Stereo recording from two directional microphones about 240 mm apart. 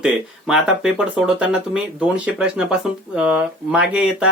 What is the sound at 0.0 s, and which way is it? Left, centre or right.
Speech, centre.